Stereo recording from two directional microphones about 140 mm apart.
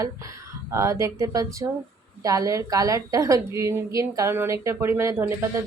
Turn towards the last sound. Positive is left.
turn(degrees=-15)  # may be behind; listen again after turning